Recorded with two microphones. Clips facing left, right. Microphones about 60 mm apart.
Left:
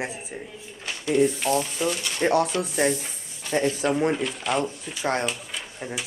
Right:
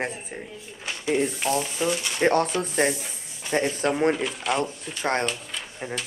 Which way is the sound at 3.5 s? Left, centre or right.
Right.